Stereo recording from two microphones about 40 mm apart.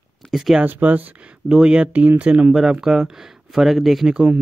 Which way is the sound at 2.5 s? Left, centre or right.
Centre.